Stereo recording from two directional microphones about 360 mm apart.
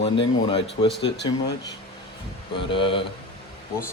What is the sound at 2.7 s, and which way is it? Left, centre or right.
Speech, centre.